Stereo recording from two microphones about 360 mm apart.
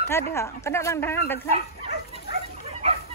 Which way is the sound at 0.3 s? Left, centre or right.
Centre.